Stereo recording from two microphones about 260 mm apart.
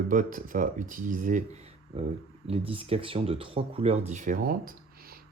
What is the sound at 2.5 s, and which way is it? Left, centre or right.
Speech, right.